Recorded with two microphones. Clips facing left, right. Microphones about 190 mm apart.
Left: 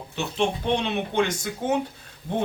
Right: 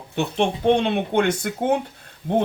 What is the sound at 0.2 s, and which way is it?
Speech, 55° right (ahead or behind).